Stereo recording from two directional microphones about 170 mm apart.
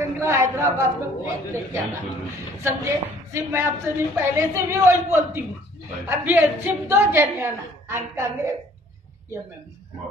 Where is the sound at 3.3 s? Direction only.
15° right (ahead or behind).